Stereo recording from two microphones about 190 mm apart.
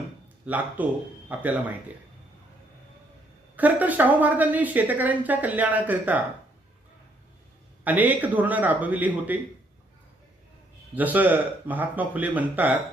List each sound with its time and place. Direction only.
0.4 s speech: 10° right (ahead or behind)
3.5 s speech: 10° right (ahead or behind)
7.9 s speech: 10° right (ahead or behind)
10.9 s speech: 10° right (ahead or behind)